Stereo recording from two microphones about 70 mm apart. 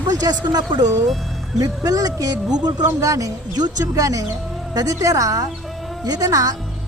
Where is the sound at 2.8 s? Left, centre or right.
Right.